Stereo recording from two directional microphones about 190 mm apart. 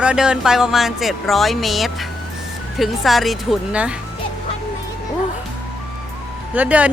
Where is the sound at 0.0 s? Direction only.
5° right (ahead or behind).